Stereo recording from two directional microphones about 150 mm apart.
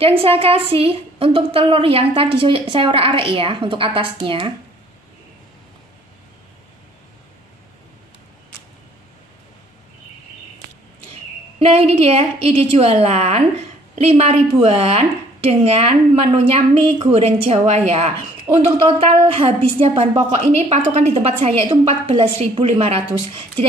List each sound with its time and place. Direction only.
0.0 s a woman's voice: 40° right (ahead or behind)
11.6 s a woman's voice: 40° right (ahead or behind)
18.5 s speech: 25° right (ahead or behind)
18.9 s a woman's voice: 40° right (ahead or behind)